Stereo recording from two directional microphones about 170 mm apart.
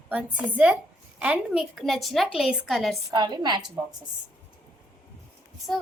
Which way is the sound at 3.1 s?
25° right (ahead or behind).